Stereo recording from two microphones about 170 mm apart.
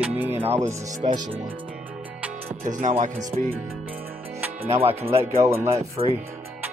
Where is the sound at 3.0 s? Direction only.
45° right (ahead or behind).